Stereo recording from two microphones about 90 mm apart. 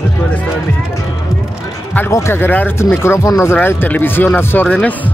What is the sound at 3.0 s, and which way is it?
Speech, 30° left (ahead or behind).